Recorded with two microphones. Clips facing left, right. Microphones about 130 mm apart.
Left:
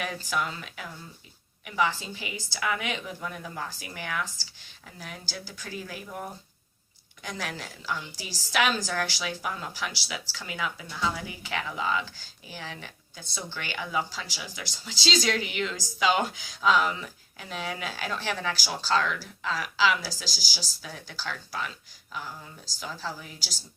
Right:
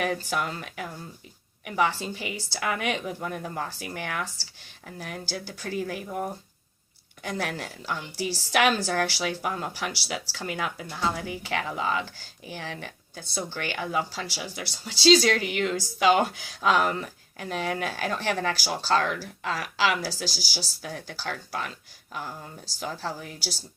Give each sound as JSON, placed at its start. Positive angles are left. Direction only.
{"t": 0.0, "sound": "a woman's voice", "side_deg": -50}